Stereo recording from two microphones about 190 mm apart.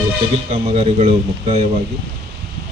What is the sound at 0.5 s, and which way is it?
Speech, 30° right (ahead or behind).